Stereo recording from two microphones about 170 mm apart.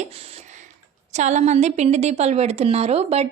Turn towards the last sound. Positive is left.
turn(degrees=-40)  # may be behind; listen again after turning